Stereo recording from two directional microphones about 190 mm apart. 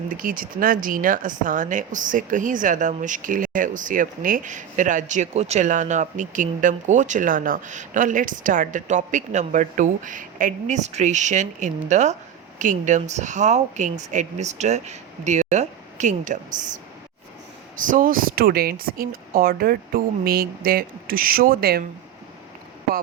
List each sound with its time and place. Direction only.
0.1 s speech: 45° right (ahead or behind)
17.7 s speech: 45° right (ahead or behind)